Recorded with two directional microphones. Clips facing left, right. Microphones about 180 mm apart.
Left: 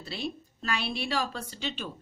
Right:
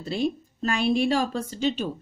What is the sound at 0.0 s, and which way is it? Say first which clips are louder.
A man's voice: right 9 dB; 45° right (ahead or behind).